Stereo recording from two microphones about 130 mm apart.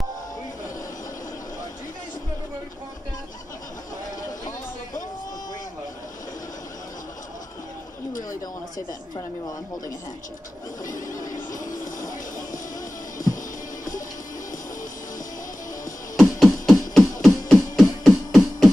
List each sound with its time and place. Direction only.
8.2 s a sound: 25° left (ahead or behind)
10.9 s music: 90° left
16.2 s music: centre (ahead or behind)